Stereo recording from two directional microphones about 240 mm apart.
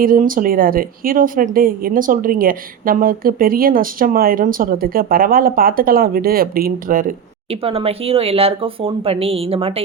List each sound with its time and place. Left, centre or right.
0.0 s a woman's voice: right
7.5 s speech: right